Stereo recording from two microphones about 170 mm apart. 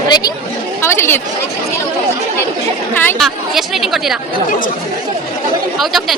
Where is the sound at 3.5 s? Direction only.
Centre (ahead or behind).